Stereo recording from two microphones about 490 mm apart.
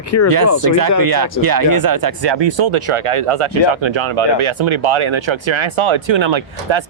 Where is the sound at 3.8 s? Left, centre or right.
Right.